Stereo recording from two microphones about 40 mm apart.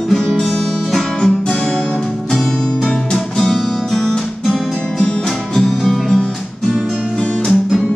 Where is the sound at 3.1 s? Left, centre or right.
Centre.